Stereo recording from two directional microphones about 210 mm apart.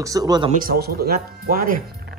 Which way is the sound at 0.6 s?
45° right (ahead or behind).